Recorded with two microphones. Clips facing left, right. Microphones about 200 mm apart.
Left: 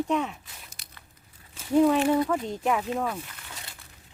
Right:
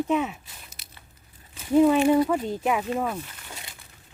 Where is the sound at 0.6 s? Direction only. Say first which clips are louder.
Right 1 dB; 20° right (ahead or behind).